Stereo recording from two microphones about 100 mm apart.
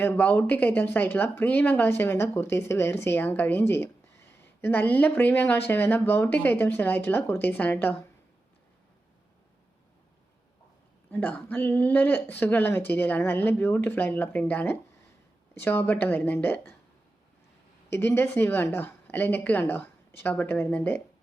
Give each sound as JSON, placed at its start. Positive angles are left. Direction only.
{"t": 0.0, "sound": "speech", "side_deg": 20}
{"t": 11.1, "sound": "speech", "side_deg": 15}
{"t": 17.8, "sound": "speech", "side_deg": 25}